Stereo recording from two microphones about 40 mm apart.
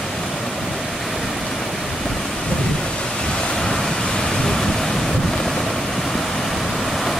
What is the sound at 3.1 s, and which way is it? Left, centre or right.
Waves, left.